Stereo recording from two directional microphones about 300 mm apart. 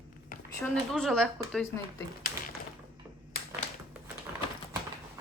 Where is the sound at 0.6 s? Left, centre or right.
Centre.